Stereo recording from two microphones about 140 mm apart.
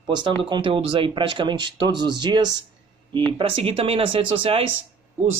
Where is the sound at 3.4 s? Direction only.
40° right (ahead or behind).